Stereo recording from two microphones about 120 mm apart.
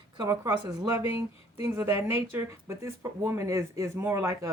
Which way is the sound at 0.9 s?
20° right (ahead or behind).